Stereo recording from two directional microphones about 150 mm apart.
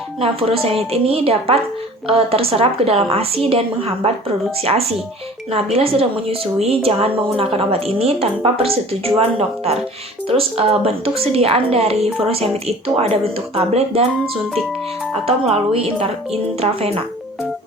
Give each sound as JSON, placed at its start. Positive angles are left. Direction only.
{"t": 0.2, "sound": "speech", "side_deg": -40}
{"t": 10.2, "sound": "speech", "side_deg": -40}
{"t": 15.3, "sound": "speech", "side_deg": -45}